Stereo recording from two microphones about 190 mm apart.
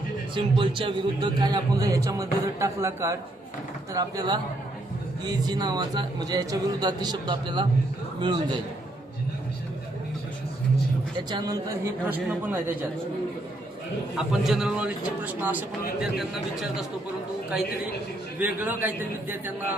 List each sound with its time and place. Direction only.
0.3 s a man's voice: 25° right (ahead or behind)
11.3 s a man's voice: 25° right (ahead or behind)
12.0 s a man's voice: 10° right (ahead or behind)
14.4 s a man's voice: centre (ahead or behind)
18.3 s a man's voice: 10° right (ahead or behind)